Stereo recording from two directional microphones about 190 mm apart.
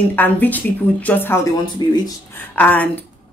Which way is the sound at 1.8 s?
20° left (ahead or behind).